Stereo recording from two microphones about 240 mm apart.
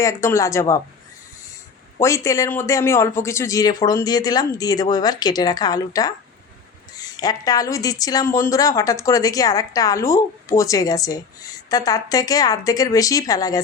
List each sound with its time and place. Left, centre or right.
0.0 s speech: centre
2.0 s speech: centre